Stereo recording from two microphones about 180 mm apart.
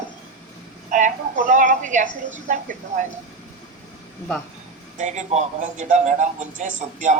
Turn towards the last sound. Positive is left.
turn(degrees=-45)  # may be behind; listen again after turning